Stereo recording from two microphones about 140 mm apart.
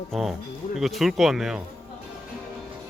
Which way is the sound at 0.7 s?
Centre (ahead or behind).